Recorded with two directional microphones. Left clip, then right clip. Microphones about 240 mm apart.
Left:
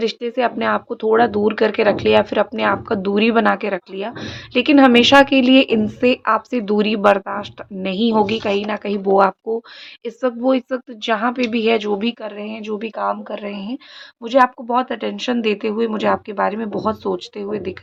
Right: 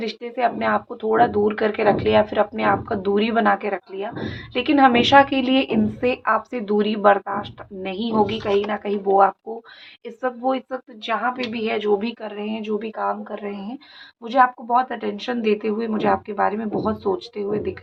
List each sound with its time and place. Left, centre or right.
0.0 s speech: left